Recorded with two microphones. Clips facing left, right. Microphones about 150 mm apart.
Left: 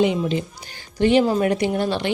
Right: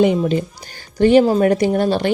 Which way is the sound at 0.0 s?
50° right (ahead or behind).